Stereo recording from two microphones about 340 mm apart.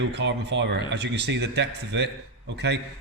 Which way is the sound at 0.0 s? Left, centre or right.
Right.